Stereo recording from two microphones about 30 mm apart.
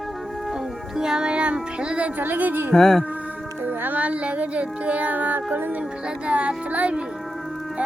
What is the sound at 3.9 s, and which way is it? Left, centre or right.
Music, right.